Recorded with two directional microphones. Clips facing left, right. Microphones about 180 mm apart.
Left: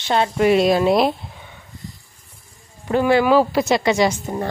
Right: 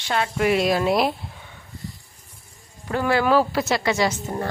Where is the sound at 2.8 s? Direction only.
20° left (ahead or behind).